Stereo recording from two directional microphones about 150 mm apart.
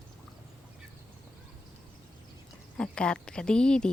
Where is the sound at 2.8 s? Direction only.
5° left (ahead or behind).